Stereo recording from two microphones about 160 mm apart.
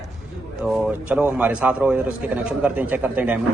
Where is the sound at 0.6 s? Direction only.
Centre (ahead or behind).